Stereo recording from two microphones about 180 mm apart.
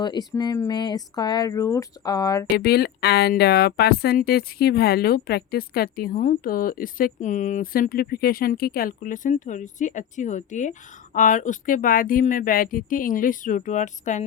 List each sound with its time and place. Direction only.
0.0 s speech: 25° left (ahead or behind)
2.6 s speech: 60° left (ahead or behind); by 14.3 s 40° left (ahead or behind)